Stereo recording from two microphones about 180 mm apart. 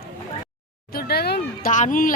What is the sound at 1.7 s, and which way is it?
Speech, 45° left (ahead or behind).